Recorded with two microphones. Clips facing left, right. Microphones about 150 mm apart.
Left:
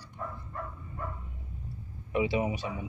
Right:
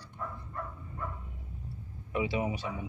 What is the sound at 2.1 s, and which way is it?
Speech, 15° left (ahead or behind).